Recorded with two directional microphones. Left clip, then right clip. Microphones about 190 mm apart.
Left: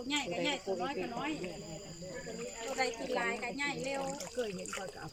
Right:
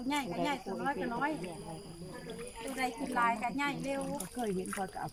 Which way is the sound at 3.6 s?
30° right (ahead or behind).